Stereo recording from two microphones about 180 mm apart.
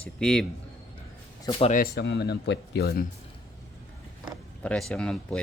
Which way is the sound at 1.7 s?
60° left (ahead or behind).